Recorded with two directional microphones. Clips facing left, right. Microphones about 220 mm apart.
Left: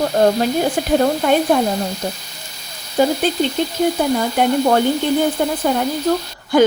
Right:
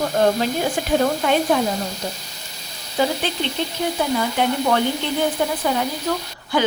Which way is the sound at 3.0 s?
40° left (ahead or behind).